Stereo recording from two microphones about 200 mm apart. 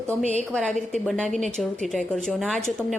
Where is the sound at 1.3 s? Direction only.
35° right (ahead or behind).